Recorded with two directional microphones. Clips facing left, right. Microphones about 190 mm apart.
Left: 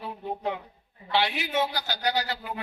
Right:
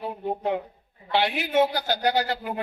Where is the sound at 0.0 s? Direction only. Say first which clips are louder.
Right 4 dB; 50° right (ahead or behind).